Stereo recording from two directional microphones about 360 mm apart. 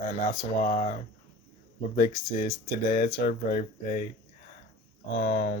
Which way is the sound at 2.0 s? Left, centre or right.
Left.